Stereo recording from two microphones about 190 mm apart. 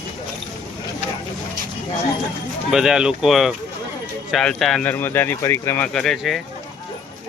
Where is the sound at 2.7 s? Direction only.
5° right (ahead or behind).